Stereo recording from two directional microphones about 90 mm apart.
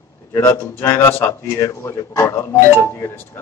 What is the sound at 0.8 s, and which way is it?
Speech, 25° left (ahead or behind).